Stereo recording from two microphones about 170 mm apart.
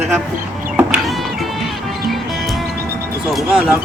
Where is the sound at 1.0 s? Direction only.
Centre (ahead or behind).